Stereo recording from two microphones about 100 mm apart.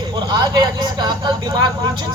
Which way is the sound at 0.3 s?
45° right (ahead or behind).